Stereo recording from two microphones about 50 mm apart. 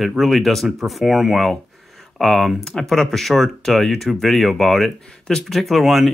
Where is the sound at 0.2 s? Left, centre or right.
Centre.